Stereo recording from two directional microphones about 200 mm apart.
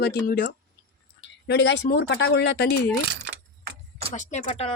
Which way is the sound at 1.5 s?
60° left (ahead or behind).